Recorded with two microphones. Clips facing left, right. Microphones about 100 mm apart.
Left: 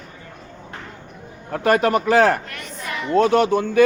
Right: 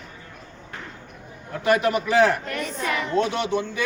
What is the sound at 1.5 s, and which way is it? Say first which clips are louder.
A man's voice: left 3 dB; 45° left (ahead or behind).